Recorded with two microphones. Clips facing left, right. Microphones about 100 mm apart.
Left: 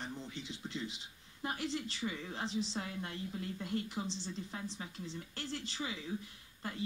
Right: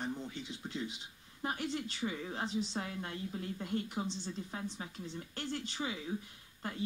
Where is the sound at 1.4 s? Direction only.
10° right (ahead or behind).